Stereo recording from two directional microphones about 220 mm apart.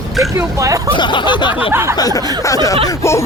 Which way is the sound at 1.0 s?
20° left (ahead or behind).